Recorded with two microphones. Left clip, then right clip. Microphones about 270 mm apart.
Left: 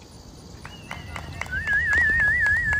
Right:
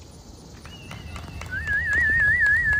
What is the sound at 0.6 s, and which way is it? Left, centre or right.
Horse, left.